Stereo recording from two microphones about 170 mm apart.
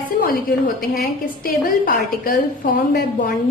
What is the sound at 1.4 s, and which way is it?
A woman's voice, 55° left (ahead or behind).